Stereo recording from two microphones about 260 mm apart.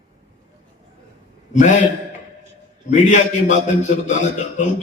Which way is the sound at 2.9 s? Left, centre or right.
Left.